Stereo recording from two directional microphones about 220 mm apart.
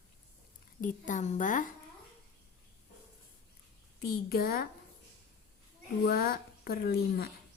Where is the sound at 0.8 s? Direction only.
35° left (ahead or behind).